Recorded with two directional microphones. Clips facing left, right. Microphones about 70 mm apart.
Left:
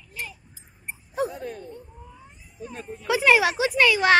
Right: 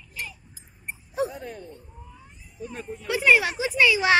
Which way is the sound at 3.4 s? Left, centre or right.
Left.